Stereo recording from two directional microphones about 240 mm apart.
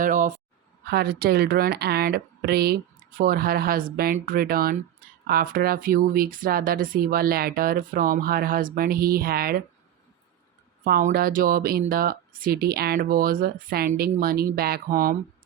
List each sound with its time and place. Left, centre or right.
0.0 s a sound: right
0.9 s a woman's voice: right
10.8 s a woman's voice: right